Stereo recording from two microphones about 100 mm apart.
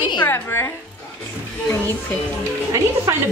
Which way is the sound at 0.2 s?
25° left (ahead or behind).